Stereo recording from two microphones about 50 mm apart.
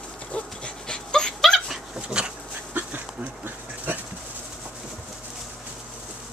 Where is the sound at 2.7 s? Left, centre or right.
Right.